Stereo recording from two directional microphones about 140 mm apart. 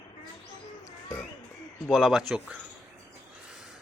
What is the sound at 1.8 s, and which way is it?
Speech, centre (ahead or behind).